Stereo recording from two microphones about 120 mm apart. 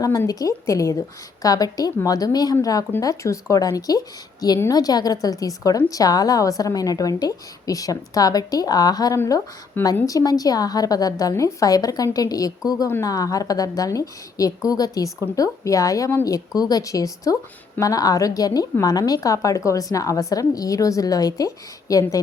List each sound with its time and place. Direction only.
0.0 s a woman's voice: 30° left (ahead or behind)